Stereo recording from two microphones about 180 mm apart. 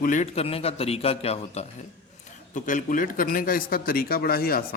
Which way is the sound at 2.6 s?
45° left (ahead or behind).